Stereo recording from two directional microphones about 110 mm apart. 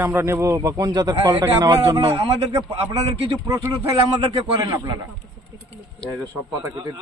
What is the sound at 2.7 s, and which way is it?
Speech, 65° right (ahead or behind).